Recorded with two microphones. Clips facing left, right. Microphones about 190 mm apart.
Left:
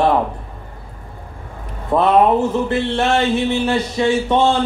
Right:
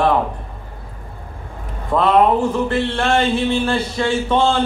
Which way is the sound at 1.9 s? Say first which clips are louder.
Left 1 dB; 20° left (ahead or behind).